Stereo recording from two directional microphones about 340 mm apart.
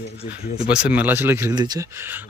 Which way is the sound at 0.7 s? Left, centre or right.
Centre.